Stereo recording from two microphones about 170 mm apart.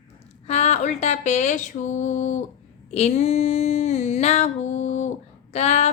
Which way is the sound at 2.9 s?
40° left (ahead or behind).